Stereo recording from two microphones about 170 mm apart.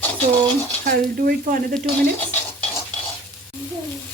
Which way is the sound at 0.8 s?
60° right (ahead or behind).